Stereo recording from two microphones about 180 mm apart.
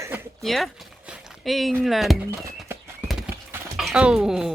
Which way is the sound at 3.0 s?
5° right (ahead or behind).